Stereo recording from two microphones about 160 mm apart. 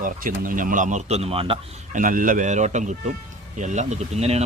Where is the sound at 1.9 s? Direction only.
55° right (ahead or behind).